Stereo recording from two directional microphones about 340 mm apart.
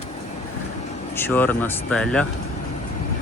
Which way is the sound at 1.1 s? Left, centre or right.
Centre.